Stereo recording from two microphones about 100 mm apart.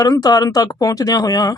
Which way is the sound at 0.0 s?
40° left (ahead or behind).